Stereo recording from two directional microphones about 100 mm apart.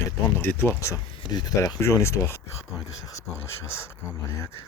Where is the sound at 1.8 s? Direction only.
30° left (ahead or behind).